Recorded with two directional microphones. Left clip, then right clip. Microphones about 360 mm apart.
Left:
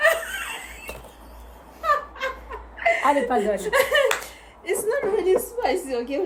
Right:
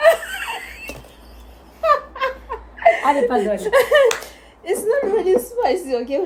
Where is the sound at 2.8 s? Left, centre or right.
Centre.